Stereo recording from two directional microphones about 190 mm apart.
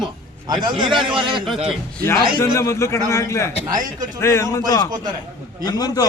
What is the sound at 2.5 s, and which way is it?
A man's voice, 15° left (ahead or behind).